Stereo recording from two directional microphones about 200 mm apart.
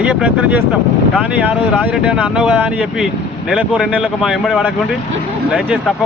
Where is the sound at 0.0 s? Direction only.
5° right (ahead or behind).